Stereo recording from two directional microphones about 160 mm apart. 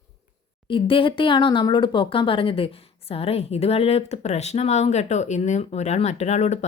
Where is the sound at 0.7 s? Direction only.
35° left (ahead or behind).